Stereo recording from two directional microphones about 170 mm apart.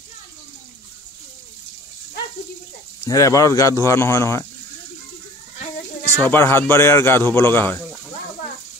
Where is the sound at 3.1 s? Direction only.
20° left (ahead or behind).